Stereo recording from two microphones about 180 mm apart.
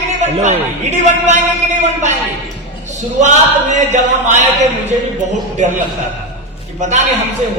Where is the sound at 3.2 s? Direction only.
40° right (ahead or behind).